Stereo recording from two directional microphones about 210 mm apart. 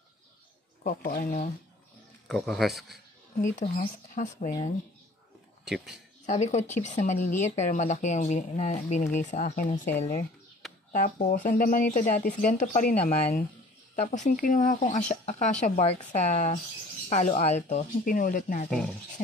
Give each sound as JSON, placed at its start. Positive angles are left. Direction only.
{"t": 0.8, "sound": "speech", "side_deg": 45}
{"t": 2.2, "sound": "speech", "side_deg": 0}
{"t": 3.3, "sound": "speech", "side_deg": 35}
{"t": 6.2, "sound": "speech", "side_deg": 30}
{"t": 10.9, "sound": "speech", "side_deg": 40}